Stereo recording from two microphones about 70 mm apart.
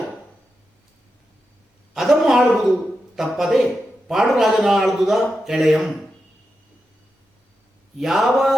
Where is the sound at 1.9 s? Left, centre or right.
Centre.